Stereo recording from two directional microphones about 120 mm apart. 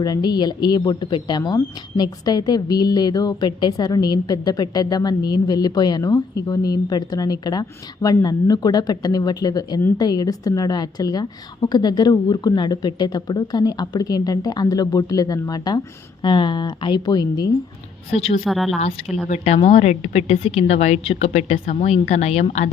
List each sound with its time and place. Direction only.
0.0 s speech: 35° left (ahead or behind)
18.1 s a woman's voice: 55° left (ahead or behind)
18.4 s a woman's voice: centre (ahead or behind)
19.6 s a woman's voice: 70° left (ahead or behind)